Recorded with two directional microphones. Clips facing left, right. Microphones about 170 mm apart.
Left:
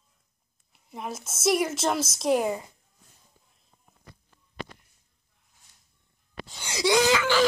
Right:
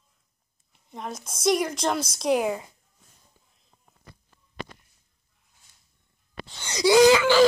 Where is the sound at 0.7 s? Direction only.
5° left (ahead or behind).